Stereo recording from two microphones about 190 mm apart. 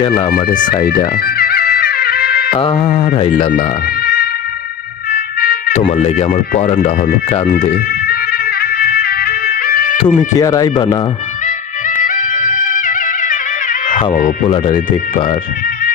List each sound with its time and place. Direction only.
0.3 s speech: 45° left (ahead or behind)
0.9 s music: 50° left (ahead or behind)
2.6 s speech: 25° left (ahead or behind)
3.6 s music: 55° left (ahead or behind)
5.1 s a sound: 55° left (ahead or behind)
6.1 s speech: 35° left (ahead or behind)
8.0 s music: 55° left (ahead or behind)
10.2 s speech: 20° left (ahead or behind)
12.0 s music: 45° left (ahead or behind)
14.4 s speech: 25° left (ahead or behind)